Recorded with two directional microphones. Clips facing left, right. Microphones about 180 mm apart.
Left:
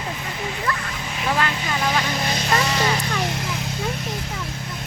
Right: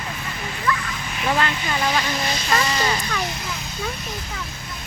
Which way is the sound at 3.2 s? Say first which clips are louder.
Left 4 dB; 85° left.